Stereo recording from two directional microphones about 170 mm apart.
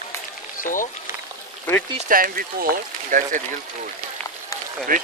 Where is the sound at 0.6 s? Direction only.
50° left (ahead or behind).